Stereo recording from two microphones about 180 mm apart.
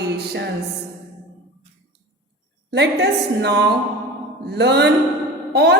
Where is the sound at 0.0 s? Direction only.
70° right (ahead or behind).